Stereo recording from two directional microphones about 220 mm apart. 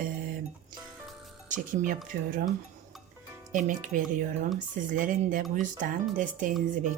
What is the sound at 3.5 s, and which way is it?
A woman's voice, 35° right (ahead or behind).